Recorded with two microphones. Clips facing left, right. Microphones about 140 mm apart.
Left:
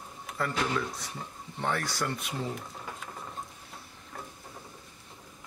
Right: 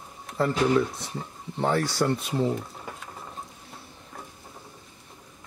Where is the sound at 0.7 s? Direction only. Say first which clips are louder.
Right 9 dB; 25° right (ahead or behind).